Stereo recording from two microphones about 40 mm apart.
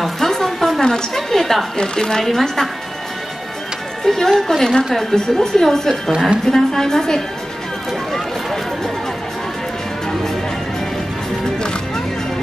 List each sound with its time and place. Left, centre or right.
0.0 s a sound: centre
0.8 s a woman's voice: centre
1.8 s a woman's voice: centre
4.0 s a woman's voice: centre